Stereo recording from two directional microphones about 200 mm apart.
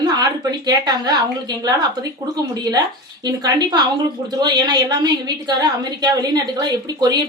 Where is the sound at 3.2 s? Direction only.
20° right (ahead or behind).